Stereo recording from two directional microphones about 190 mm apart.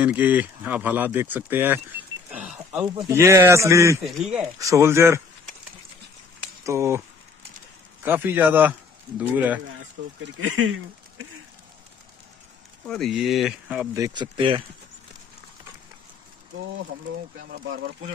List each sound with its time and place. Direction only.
0.0 s speech: 10° right (ahead or behind)
4.0 s speech: centre (ahead or behind)
4.4 s speech: 15° right (ahead or behind)
6.6 s speech: 15° right (ahead or behind)
8.0 s speech: 10° right (ahead or behind)
10.2 s speech: 90° right
12.8 s speech: 5° left (ahead or behind)
13.9 s speech: 20° right (ahead or behind)